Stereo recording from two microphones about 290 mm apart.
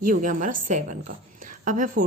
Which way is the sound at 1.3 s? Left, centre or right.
Right.